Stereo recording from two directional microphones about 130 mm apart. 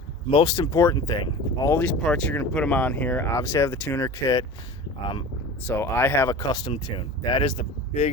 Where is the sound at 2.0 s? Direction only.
5° left (ahead or behind).